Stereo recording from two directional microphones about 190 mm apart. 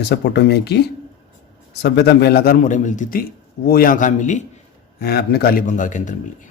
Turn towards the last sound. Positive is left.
turn(degrees=40)  # may be behind; listen again after turning